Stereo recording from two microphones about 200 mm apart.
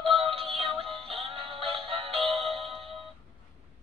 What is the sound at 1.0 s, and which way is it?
Music, 30° right (ahead or behind).